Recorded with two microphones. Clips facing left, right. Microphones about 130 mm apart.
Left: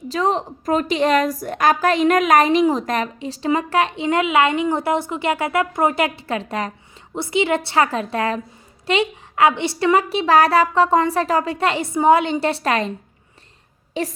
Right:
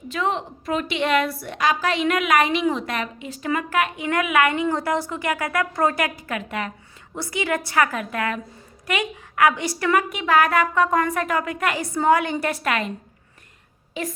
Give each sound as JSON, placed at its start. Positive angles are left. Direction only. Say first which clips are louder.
{"t": 0.1, "sound": "a woman's voice", "louder": "left 4 dB", "side_deg": 35}
{"t": 7.1, "sound": "a woman's voice", "louder": "left 6 dB", "side_deg": 25}
{"t": 14.0, "sound": "a woman's voice", "louder": "left 5 dB", "side_deg": 35}